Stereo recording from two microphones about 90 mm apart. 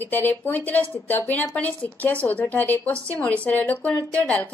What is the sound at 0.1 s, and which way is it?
A woman's voice, 20° left (ahead or behind).